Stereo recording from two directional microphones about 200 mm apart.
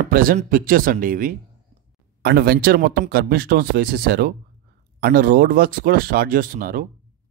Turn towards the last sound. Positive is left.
turn(degrees=-45)  # may be behind; listen again after turning